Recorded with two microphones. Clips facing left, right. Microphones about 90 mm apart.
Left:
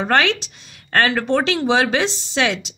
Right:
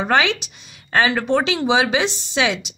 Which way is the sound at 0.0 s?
5° right (ahead or behind).